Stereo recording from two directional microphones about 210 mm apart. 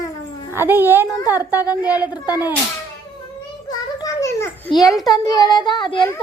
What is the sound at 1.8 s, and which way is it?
Speech, 5° right (ahead or behind).